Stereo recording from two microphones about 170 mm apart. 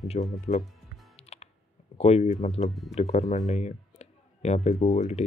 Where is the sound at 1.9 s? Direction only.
40° left (ahead or behind).